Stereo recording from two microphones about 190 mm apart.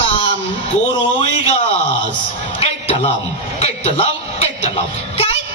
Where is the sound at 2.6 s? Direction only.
35° left (ahead or behind).